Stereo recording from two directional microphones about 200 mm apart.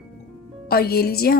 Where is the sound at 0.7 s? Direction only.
50° left (ahead or behind).